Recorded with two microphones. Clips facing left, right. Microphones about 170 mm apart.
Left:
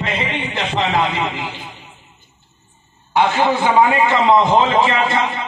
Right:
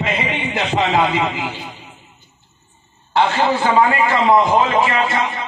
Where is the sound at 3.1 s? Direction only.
20° left (ahead or behind).